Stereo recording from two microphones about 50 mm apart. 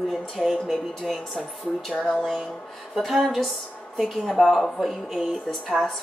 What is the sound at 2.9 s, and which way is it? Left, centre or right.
Speech, centre.